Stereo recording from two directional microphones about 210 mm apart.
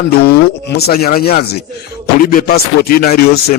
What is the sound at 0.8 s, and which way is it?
Speech, 50° left (ahead or behind).